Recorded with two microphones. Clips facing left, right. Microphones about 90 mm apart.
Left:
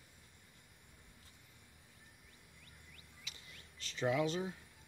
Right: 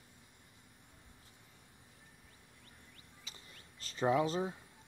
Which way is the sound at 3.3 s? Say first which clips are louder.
Even; 35° right (ahead or behind).